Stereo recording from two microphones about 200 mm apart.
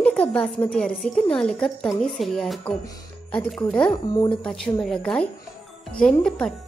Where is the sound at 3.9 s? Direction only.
25° left (ahead or behind).